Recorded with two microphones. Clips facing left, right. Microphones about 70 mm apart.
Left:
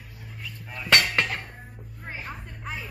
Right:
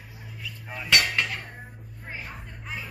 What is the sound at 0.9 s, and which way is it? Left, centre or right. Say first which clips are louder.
Hammer: left 2 dB; left.